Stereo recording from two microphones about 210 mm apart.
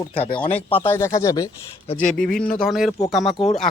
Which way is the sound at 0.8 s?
15° left (ahead or behind).